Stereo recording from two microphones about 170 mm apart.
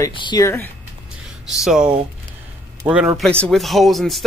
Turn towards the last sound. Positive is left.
turn(degrees=0)  # may be behind; listen again after turning